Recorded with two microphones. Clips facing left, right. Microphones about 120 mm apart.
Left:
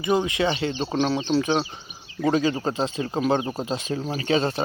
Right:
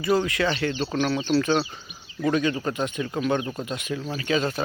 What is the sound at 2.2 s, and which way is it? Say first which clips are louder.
Speech: left 2 dB; 25° left (ahead or behind).